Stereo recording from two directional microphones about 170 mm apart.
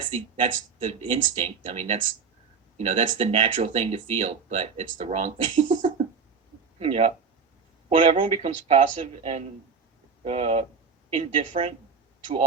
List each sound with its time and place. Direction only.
0.1 s speech: 40° right (ahead or behind)
6.7 s a man's voice: 35° right (ahead or behind)
8.1 s speech: 45° right (ahead or behind)